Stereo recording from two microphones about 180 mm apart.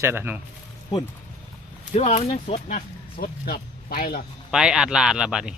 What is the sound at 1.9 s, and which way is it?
Speech, 35° left (ahead or behind).